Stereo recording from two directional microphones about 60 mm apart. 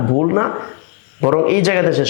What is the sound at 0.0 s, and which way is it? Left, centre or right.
Speech, left.